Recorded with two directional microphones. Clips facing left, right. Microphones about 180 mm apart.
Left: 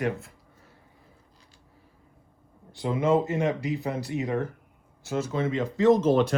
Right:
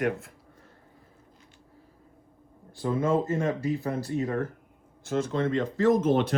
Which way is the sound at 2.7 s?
15° left (ahead or behind).